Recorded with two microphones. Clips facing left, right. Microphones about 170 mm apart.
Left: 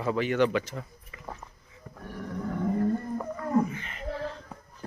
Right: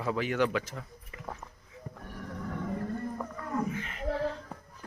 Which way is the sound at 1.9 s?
15° right (ahead or behind).